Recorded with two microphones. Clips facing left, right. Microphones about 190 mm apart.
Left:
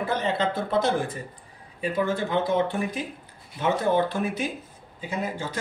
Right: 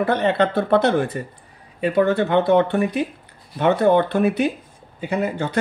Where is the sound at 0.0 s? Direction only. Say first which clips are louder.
Right 7 dB; 65° right (ahead or behind).